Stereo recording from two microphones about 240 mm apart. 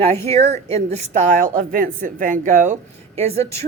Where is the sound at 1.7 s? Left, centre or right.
Right.